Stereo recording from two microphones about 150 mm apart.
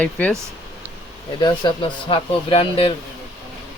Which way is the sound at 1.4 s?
30° left (ahead or behind).